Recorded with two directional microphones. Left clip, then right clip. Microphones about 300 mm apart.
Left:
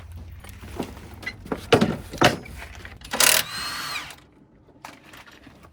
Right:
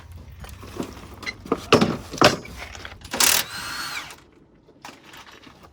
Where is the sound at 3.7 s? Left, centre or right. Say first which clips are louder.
Even; centre.